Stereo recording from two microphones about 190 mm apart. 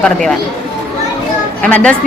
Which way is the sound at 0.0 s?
Centre (ahead or behind).